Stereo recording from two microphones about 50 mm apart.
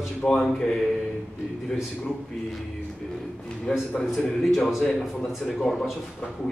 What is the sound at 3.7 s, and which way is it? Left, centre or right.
Speech, centre.